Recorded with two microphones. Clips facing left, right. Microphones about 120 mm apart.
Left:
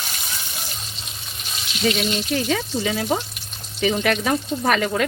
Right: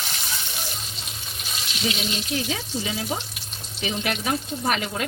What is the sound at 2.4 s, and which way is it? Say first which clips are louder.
Speech: left 6 dB; 75° left (ahead or behind).